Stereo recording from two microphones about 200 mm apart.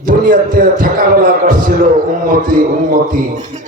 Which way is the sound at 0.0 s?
45° right (ahead or behind).